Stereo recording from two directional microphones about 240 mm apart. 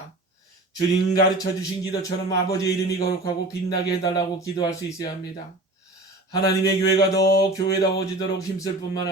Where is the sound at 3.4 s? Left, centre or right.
Centre.